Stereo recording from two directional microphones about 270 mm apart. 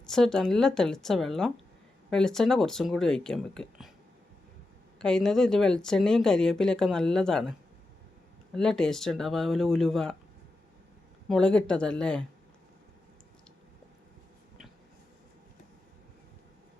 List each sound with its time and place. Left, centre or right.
0.0 s speech: centre
4.9 s speech: centre
8.5 s speech: centre
11.3 s speech: centre